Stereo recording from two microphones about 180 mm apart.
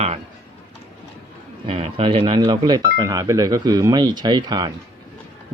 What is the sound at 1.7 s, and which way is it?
A man's voice, 35° right (ahead or behind).